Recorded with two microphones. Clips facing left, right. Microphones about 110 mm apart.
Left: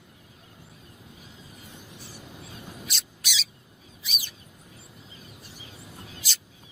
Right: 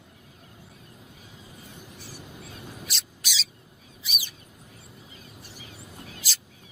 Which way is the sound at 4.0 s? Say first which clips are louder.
Right 1 dB; 5° right (ahead or behind).